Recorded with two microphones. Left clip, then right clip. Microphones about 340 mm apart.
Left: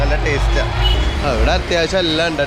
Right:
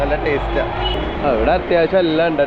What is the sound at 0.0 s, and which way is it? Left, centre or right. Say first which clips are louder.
Speech: right 1 dB; centre.